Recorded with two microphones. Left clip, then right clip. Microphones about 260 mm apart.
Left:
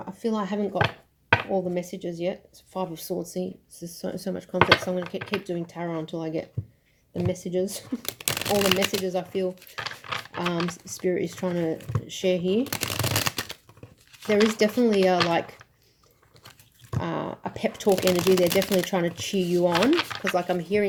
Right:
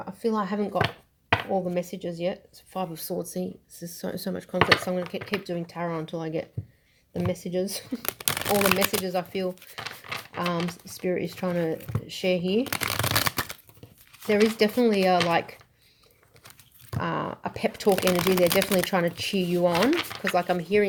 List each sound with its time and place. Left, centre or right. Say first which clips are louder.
0.3 s speech: right 1 dB; right
17.0 s speech: right 1 dB; right
20.6 s speech: right 2 dB; right